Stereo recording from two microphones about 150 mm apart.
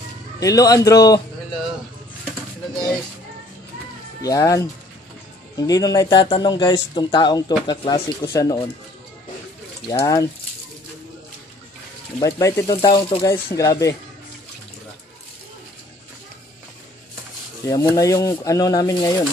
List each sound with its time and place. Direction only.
0.4 s speech: 25° left (ahead or behind)
4.2 s speech: 25° left (ahead or behind)
9.8 s speech: 20° left (ahead or behind)
12.2 s speech: 20° left (ahead or behind)
17.6 s speech: 20° left (ahead or behind)